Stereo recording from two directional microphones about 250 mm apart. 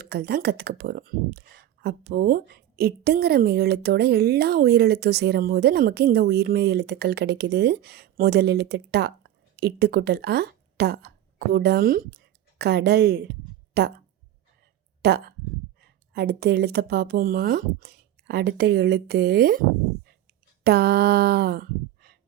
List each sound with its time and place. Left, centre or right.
0.0 s speech: right
15.0 s speech: right
20.7 s speech: right